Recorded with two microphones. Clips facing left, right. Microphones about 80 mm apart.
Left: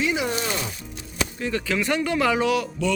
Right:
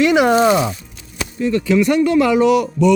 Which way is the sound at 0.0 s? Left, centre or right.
Right.